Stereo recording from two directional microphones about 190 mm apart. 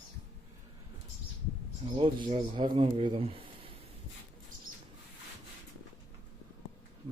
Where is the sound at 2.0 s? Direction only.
25° right (ahead or behind).